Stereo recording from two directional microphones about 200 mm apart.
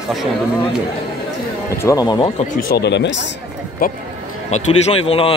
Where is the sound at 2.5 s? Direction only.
50° left (ahead or behind).